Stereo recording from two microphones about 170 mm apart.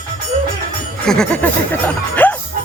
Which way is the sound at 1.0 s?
5° left (ahead or behind).